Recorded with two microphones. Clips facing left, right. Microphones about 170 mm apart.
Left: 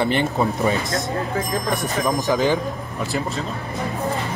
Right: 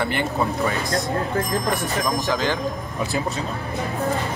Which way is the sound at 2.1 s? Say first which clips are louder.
Left 6 dB; 15° left (ahead or behind).